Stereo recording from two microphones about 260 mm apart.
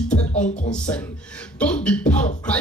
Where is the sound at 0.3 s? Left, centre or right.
Left.